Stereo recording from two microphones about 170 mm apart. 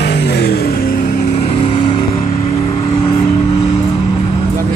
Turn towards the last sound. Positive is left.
turn(degrees=35)  # may be behind; listen again after turning